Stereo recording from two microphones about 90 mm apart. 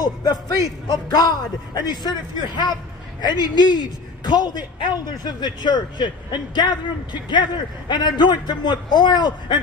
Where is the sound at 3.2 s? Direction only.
55° left (ahead or behind).